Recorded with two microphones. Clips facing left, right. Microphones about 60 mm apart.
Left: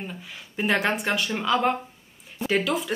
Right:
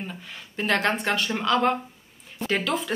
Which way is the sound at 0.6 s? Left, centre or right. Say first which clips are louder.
Even; centre.